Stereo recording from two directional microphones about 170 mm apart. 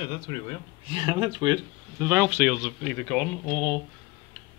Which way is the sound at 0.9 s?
30° right (ahead or behind).